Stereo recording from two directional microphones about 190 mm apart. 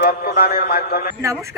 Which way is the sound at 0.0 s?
45° left (ahead or behind).